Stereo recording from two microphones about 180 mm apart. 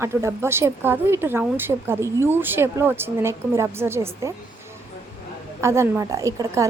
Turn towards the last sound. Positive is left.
turn(degrees=-15)  # may be behind; listen again after turning